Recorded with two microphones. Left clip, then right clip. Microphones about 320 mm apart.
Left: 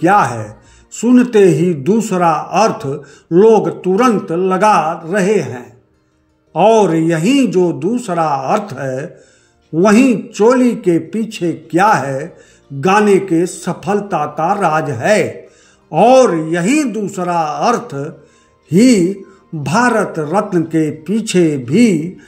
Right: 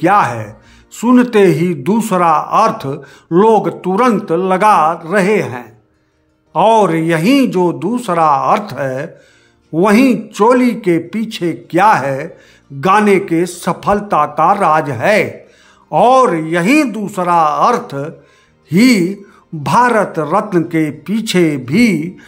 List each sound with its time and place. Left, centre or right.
0.0 s speech: centre